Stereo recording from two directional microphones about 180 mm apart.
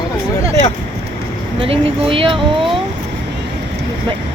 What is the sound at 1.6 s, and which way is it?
Speech, 30° right (ahead or behind).